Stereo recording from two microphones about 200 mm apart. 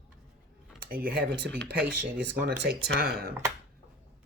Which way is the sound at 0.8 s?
50° right (ahead or behind).